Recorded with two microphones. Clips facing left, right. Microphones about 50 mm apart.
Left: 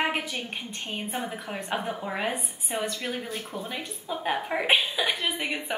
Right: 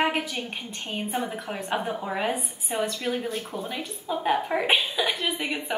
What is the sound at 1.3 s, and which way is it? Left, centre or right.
A woman's voice, centre.